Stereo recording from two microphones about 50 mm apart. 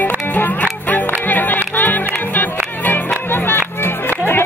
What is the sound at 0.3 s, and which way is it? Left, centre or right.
Music, left.